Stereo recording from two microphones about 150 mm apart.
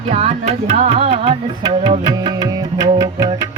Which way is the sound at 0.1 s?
45° right (ahead or behind).